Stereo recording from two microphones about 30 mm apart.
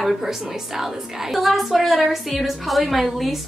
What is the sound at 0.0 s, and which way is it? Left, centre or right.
A woman's voice, centre.